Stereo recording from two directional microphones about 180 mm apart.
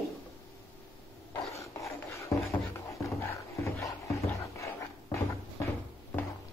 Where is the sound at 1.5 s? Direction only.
15° left (ahead or behind).